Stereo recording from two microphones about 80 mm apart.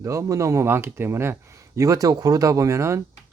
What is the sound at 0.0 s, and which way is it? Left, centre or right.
Speech, right.